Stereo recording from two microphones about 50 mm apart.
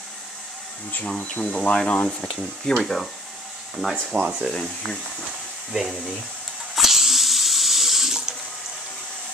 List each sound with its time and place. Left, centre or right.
1.0 s speech: centre
2.6 s speech: centre
4.1 s speech: right
4.5 s speech: centre
6.7 s water: centre